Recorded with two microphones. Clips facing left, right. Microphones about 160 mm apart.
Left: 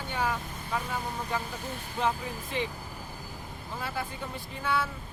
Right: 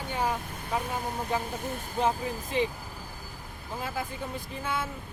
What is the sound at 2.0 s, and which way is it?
Speech, 20° right (ahead or behind).